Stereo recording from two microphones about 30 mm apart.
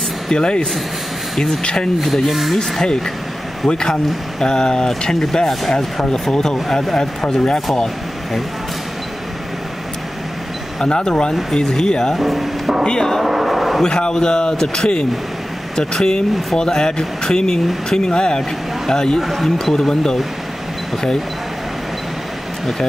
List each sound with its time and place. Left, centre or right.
0.3 s speech: left
1.3 s speech: centre
1.6 s speech: left
2.2 s speech: centre
3.6 s speech: left
10.8 s speech: left
12.2 s speech: centre
13.2 s vehicle: centre
13.8 s speech: left
19.1 s speech: centre